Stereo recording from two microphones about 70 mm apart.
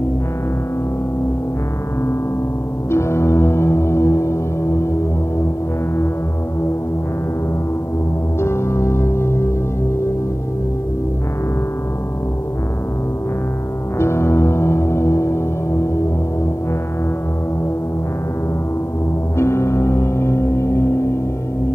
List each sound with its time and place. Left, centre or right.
2.9 s music: left
8.4 s music: left
13.9 s music: left
19.3 s music: left